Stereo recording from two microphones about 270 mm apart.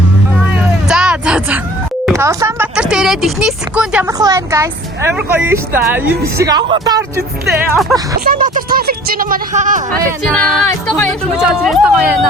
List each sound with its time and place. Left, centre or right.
0.9 s a sound: centre
2.1 s speech: centre
8.2 s speech: right
10.3 s speech: centre